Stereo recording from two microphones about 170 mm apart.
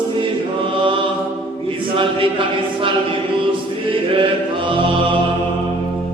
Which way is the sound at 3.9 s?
30° right (ahead or behind).